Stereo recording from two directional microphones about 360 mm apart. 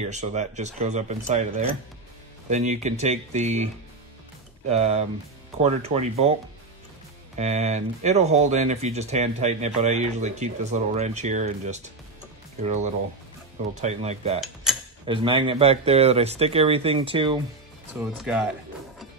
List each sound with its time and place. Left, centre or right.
0.0 s speech: centre
4.6 s speech: centre
7.3 s speech: centre
14.4 s mechanisms: centre
15.0 s speech: centre
18.1 s speech: centre